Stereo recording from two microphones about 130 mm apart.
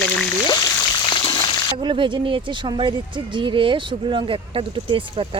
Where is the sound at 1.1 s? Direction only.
35° left (ahead or behind).